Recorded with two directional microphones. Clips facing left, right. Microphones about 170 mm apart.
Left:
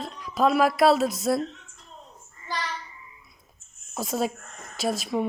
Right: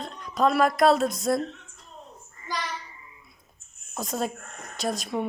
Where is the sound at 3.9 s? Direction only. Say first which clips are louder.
Left 2 dB; 5° left (ahead or behind).